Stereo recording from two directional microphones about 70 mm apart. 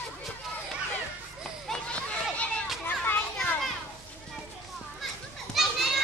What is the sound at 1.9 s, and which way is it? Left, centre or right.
Children playing, centre.